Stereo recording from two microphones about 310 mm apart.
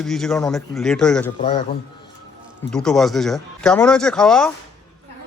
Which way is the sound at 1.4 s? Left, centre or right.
Centre.